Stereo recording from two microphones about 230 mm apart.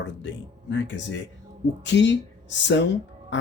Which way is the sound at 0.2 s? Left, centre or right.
Left.